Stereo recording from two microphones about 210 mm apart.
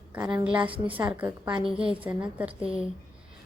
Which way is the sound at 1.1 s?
5° right (ahead or behind).